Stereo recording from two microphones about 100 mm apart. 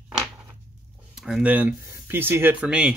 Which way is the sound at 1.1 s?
5° right (ahead or behind).